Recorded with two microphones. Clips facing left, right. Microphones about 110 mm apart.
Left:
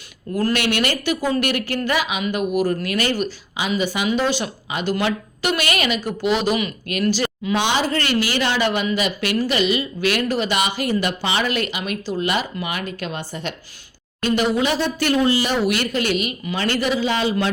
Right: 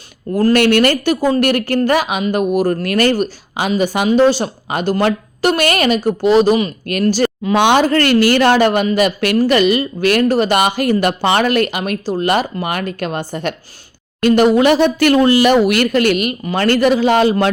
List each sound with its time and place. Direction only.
0.5 s speech: 45° right (ahead or behind)